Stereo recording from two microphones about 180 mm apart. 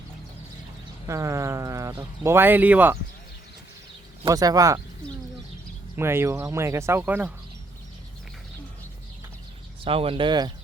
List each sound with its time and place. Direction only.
1.0 s speech: 15° right (ahead or behind)
4.2 s speech: 20° right (ahead or behind)
6.0 s speech: 15° right (ahead or behind)
9.8 s speech: 30° right (ahead or behind)